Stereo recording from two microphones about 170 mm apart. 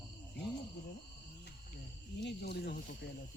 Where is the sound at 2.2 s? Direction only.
80° left.